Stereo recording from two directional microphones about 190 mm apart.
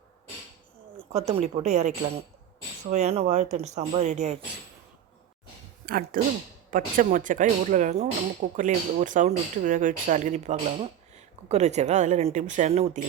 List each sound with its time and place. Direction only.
1.1 s speech: 30° right (ahead or behind)
2.9 s speech: 35° right (ahead or behind)
5.8 s speech: 50° right (ahead or behind)